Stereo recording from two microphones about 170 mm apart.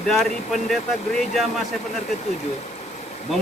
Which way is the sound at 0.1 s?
Centre (ahead or behind).